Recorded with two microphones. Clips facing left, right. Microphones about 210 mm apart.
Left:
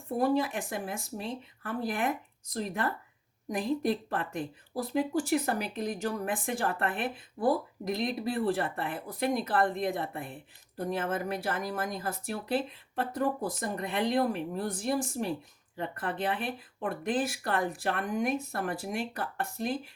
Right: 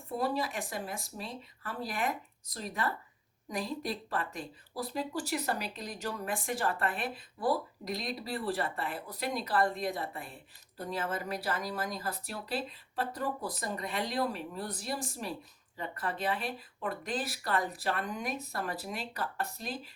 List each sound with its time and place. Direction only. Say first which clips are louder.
0.2 s speech: left 6 dB; 55° left (ahead or behind)